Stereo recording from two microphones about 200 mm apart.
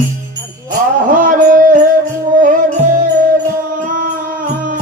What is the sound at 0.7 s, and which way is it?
Music, 40° right (ahead or behind).